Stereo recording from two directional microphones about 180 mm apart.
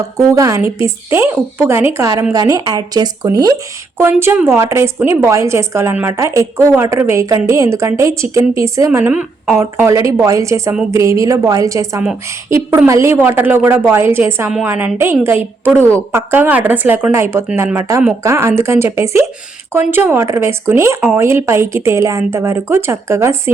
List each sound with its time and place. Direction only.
0.2 s speech: 20° right (ahead or behind)